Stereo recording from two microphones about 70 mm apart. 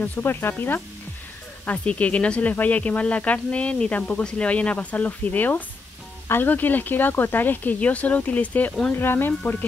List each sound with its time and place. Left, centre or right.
0.0 s speech: left